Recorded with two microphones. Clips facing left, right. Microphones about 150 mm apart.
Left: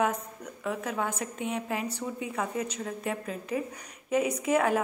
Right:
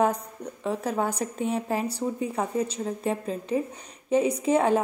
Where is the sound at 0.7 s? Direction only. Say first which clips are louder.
Right 4 dB; 35° right (ahead or behind).